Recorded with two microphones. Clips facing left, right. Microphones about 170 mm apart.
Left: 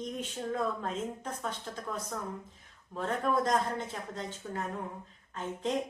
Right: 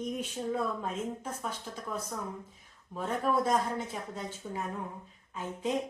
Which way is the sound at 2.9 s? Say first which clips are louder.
Even; 10° right (ahead or behind).